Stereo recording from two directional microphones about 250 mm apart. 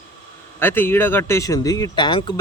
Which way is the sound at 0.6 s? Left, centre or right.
Centre.